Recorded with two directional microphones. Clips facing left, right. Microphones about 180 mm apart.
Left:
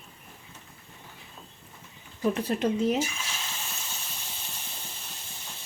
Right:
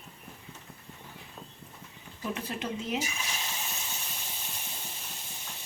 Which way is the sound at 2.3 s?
40° left (ahead or behind).